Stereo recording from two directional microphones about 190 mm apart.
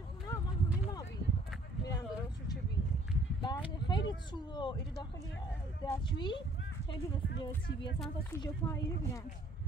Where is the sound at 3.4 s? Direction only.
25° left (ahead or behind).